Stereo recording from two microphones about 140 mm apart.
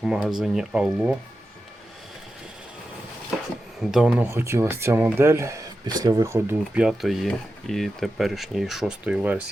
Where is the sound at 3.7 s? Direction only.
5° right (ahead or behind).